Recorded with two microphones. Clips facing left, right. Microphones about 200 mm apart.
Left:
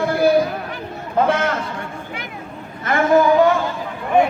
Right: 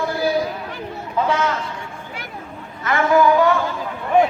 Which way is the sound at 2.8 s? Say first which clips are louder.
Left 2 dB; 50° left (ahead or behind).